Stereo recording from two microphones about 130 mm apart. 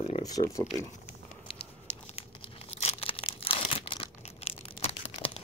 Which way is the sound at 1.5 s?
45° left (ahead or behind).